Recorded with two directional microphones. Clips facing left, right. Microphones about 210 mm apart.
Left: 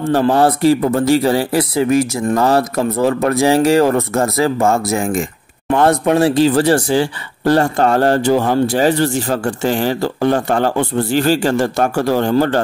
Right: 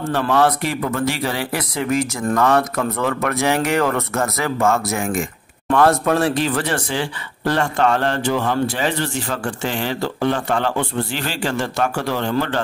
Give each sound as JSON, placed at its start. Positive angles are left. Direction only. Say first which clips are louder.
{"t": 0.0, "sound": "speech", "louder": "left 5 dB", "side_deg": 35}